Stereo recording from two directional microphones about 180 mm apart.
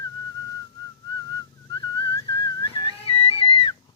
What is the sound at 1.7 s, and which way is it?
Whistling, 25° left (ahead or behind).